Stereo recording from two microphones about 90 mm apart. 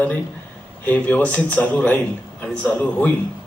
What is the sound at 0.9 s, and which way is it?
A man's voice, 20° left (ahead or behind).